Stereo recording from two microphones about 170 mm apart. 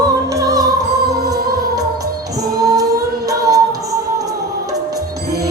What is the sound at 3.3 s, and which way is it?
Music, 20° right (ahead or behind).